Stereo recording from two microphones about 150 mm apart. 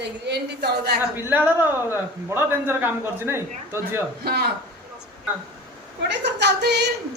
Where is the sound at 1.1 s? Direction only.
15° right (ahead or behind).